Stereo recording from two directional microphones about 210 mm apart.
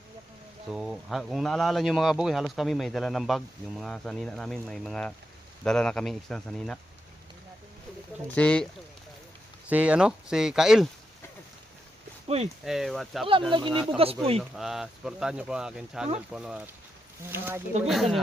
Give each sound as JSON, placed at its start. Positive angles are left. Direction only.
{"t": 0.7, "sound": "speech", "side_deg": 0}
{"t": 8.4, "sound": "speech", "side_deg": 5}
{"t": 9.6, "sound": "speech", "side_deg": -5}
{"t": 12.6, "sound": "speech", "side_deg": 0}
{"t": 13.5, "sound": "speech", "side_deg": -20}
{"t": 14.5, "sound": "speech", "side_deg": 0}
{"t": 17.8, "sound": "speech", "side_deg": 0}